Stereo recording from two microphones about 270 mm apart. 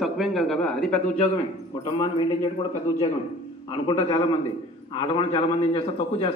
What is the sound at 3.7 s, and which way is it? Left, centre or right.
A man's voice, centre.